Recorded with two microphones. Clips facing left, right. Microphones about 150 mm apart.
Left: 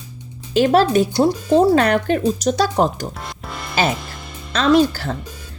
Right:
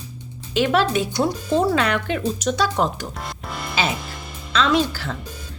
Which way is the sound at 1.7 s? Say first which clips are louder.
Left 6 dB; 45° left (ahead or behind).